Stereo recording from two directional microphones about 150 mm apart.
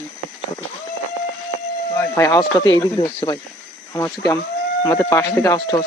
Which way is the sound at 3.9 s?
20° left (ahead or behind).